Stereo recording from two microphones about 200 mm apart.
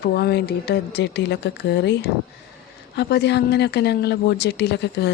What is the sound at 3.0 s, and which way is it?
Speech, 55° left (ahead or behind).